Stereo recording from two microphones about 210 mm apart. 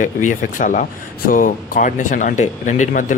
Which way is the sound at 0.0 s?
40° left (ahead or behind).